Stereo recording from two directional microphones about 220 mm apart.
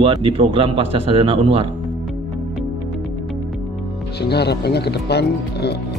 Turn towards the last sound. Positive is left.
turn(degrees=50)  # may be behind; listen again after turning